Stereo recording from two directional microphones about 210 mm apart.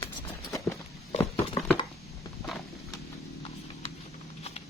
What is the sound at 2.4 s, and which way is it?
Clip-clop, centre (ahead or behind).